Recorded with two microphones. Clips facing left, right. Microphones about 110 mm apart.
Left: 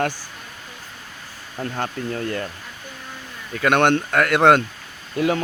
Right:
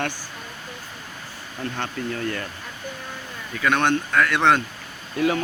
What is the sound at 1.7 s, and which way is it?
Speech, 30° left (ahead or behind).